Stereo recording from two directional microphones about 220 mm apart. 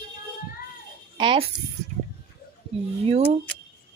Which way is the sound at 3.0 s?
25° right (ahead or behind).